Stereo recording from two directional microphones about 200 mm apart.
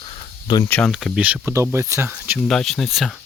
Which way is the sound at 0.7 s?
5° left (ahead or behind).